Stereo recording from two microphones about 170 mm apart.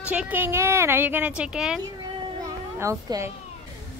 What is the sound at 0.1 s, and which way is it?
A woman's voice, 10° right (ahead or behind).